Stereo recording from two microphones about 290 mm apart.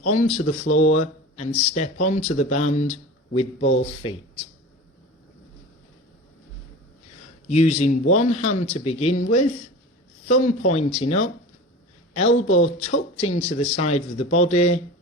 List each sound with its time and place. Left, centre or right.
0.0 s speech: left
3.3 s a man's voice: left
3.8 s speech: centre
7.4 s speech: left
10.2 s speech: left